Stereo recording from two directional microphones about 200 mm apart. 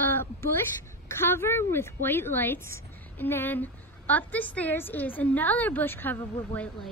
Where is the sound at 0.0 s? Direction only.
10° left (ahead or behind).